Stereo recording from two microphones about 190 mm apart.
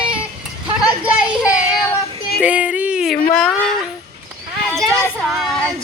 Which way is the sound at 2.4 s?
5° right (ahead or behind).